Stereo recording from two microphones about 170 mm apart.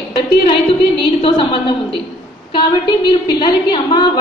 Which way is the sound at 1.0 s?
30° left (ahead or behind).